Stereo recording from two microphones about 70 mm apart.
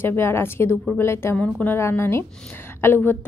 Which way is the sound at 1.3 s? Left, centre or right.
Centre.